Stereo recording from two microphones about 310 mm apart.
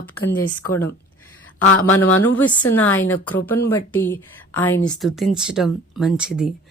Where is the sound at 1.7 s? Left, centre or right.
Left.